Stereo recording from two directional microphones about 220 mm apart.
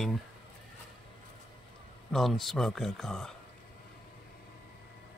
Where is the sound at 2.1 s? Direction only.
Centre (ahead or behind).